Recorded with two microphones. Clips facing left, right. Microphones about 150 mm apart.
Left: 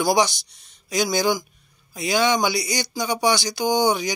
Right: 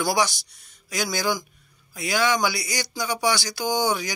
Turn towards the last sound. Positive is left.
turn(degrees=20)  # may be behind; listen again after turning